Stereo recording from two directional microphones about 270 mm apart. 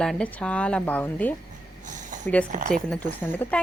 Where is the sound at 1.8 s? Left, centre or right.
Right.